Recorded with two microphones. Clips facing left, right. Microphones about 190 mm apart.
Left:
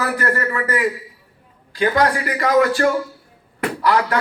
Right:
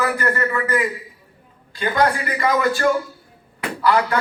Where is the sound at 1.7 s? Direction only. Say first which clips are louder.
Left 2 dB; 75° left (ahead or behind).